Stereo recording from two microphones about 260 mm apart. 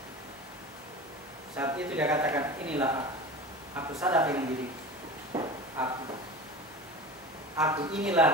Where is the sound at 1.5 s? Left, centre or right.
Centre.